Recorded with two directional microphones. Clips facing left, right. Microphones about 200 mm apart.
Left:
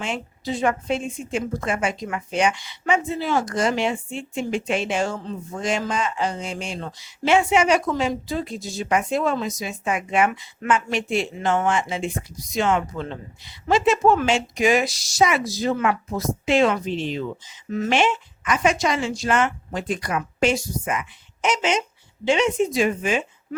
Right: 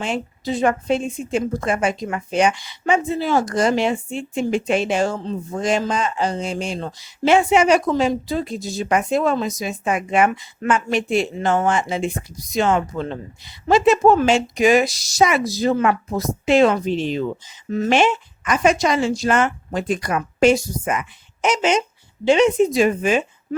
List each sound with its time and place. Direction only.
0.0 s speech: 40° right (ahead or behind)